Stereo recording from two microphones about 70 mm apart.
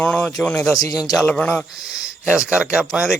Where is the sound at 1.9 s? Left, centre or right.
Centre.